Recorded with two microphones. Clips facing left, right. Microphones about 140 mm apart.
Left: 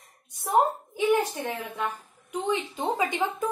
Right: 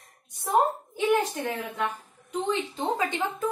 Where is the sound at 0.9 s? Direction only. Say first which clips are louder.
Left 1 dB; 10° left (ahead or behind).